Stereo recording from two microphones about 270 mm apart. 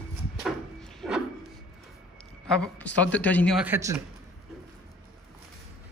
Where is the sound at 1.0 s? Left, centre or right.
Centre.